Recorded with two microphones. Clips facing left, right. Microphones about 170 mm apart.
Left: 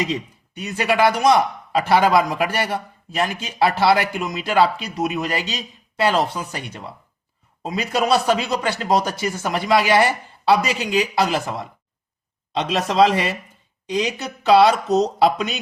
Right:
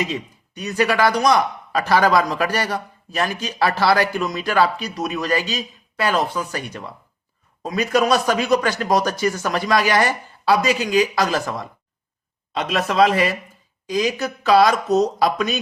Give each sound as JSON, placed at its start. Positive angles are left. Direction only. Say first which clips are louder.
{"t": 0.0, "sound": "speech", "louder": "left 1 dB", "side_deg": 25}